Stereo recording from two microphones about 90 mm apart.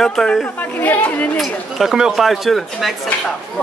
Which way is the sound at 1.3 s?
Centre (ahead or behind).